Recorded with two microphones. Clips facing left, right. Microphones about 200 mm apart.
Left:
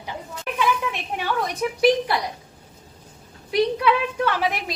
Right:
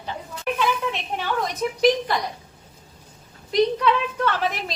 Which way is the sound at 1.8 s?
10° left (ahead or behind).